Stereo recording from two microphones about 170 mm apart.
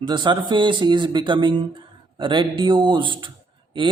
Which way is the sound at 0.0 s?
30° right (ahead or behind).